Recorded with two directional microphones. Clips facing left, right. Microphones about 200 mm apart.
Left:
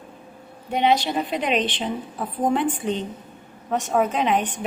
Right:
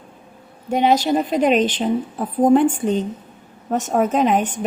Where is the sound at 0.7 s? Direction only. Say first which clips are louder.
Right 4 dB; 45° right (ahead or behind).